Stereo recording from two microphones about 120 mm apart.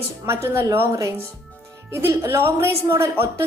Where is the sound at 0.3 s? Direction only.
20° right (ahead or behind).